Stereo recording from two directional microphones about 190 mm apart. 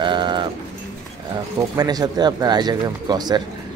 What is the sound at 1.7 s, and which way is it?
Speech, 20° right (ahead or behind).